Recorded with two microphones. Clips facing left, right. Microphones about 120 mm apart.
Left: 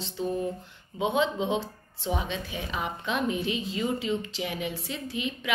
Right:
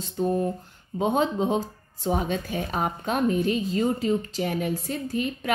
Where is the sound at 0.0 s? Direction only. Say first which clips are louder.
Right 5 dB; 40° right (ahead or behind).